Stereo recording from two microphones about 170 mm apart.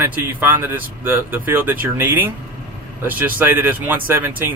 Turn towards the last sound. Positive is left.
turn(degrees=-10)  # may be behind; listen again after turning